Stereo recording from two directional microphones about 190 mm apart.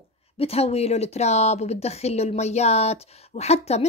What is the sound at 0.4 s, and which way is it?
A woman's voice, 30° left (ahead or behind).